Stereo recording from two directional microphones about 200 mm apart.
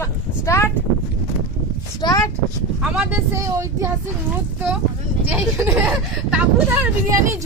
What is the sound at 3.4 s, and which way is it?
Speech, 15° right (ahead or behind).